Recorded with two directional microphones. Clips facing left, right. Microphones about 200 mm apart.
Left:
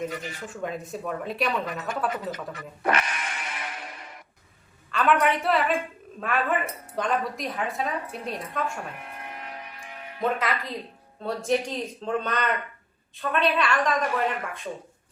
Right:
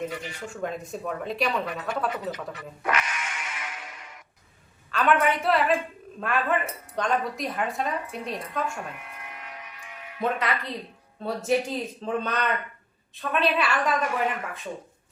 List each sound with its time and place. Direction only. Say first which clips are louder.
0.1 s speech: left 1 dB; 45° left (ahead or behind)
0.5 s speech: right 1 dB; centre (ahead or behind)
2.3 s speech: even; 45° left (ahead or behind)
2.9 s music: left 1 dB; 35° left (ahead or behind)
4.9 s speech: even; centre (ahead or behind)
9.0 s music: left 3 dB; 40° left (ahead or behind)
10.2 s speech: even; centre (ahead or behind)